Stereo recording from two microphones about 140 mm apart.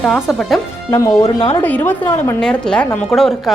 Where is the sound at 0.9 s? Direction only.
20° left (ahead or behind).